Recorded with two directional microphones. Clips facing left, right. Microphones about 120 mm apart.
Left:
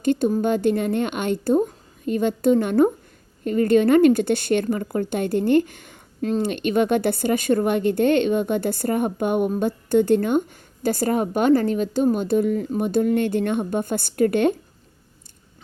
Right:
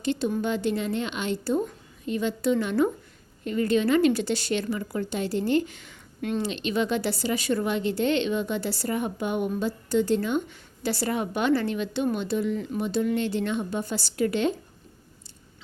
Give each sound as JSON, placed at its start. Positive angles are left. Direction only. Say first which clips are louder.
{"t": 0.0, "sound": "a woman's voice", "louder": "left 6 dB", "side_deg": 50}